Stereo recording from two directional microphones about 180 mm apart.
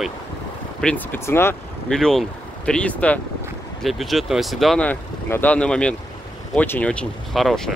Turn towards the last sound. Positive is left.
turn(degrees=0)  # may be behind; listen again after turning